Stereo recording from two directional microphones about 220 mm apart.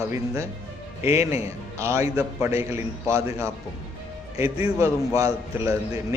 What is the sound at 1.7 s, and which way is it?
A man's voice, 15° right (ahead or behind).